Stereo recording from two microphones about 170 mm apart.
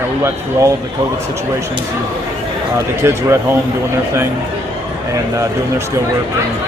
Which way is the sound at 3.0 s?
15° right (ahead or behind).